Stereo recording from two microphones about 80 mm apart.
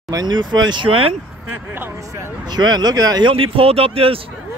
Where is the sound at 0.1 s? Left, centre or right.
Right.